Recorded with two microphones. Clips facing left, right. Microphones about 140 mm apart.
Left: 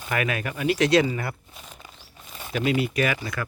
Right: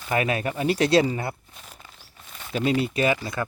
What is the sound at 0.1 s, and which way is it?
Speech, 30° right (ahead or behind).